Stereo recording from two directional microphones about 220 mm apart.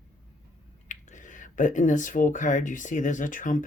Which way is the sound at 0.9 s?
35° left (ahead or behind).